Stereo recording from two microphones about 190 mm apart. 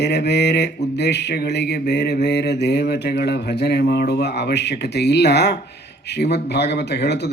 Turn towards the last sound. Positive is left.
turn(degrees=65)  # may be behind; listen again after turning